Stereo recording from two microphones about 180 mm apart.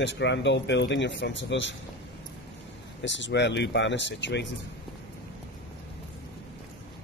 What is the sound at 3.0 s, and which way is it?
Speech, 85° left.